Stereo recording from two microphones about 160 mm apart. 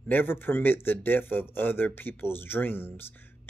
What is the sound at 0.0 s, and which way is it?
Speech, 10° left (ahead or behind).